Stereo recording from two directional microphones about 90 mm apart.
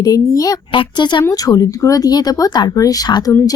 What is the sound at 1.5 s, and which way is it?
Speech, 40° left (ahead or behind).